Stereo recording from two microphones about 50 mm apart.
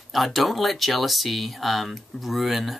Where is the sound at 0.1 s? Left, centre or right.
Centre.